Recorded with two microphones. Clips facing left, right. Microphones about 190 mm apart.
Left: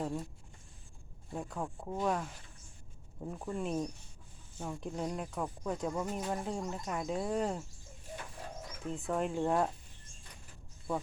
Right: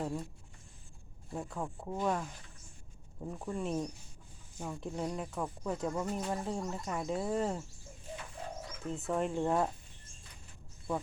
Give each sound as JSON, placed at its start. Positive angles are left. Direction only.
{"t": 0.0, "sound": "speech", "side_deg": 0}
{"t": 1.3, "sound": "speech", "side_deg": 0}
{"t": 8.8, "sound": "speech", "side_deg": 0}